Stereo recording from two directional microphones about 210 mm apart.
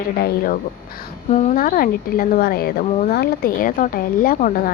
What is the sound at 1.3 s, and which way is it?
Speech, 35° left (ahead or behind).